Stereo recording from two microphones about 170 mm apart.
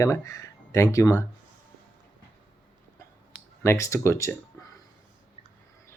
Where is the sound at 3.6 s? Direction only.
15° left (ahead or behind).